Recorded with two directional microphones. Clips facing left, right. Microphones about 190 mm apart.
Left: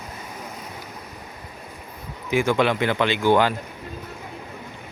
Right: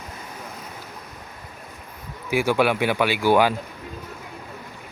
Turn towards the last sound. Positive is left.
turn(degrees=-10)  # may be behind; listen again after turning